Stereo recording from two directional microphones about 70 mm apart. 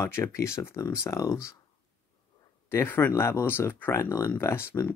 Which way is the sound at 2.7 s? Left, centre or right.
Left.